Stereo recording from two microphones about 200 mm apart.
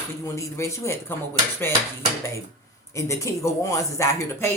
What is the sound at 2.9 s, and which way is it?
Speech, 15° left (ahead or behind).